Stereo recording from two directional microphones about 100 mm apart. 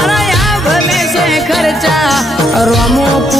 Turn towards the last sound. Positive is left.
turn(degrees=0)  # may be behind; listen again after turning